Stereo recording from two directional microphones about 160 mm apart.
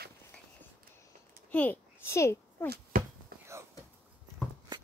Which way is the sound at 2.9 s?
65° right (ahead or behind).